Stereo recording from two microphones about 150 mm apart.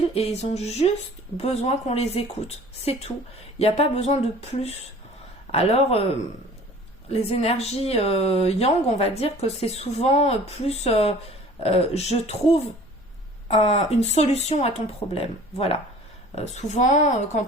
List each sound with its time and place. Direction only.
0.1 s a man's voice: 45° left (ahead or behind)
7.1 s speech: 45° left (ahead or behind)